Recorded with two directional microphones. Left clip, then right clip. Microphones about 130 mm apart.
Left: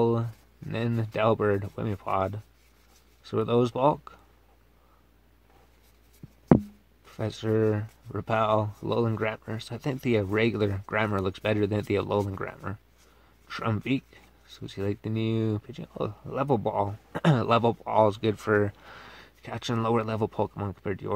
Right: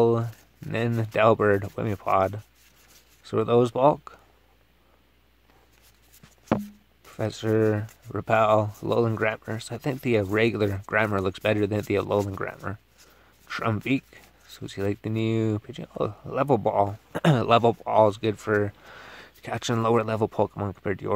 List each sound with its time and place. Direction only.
0.0 s speech: 15° right (ahead or behind)
7.1 s speech: 20° right (ahead or behind)
18.2 s speech: centre (ahead or behind)
19.1 s speech: 30° right (ahead or behind)